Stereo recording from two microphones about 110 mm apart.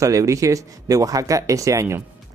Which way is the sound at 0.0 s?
30° right (ahead or behind).